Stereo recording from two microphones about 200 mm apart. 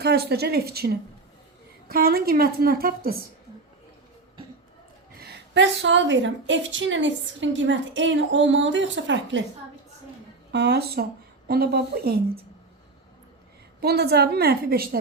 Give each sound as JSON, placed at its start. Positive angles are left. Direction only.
{"t": 0.0, "sound": "a woman's voice", "side_deg": -55}
{"t": 1.9, "sound": "a woman's voice", "side_deg": -50}
{"t": 5.2, "sound": "a woman's voice", "side_deg": -60}
{"t": 10.5, "sound": "a woman's voice", "side_deg": -55}
{"t": 13.8, "sound": "a woman's voice", "side_deg": -55}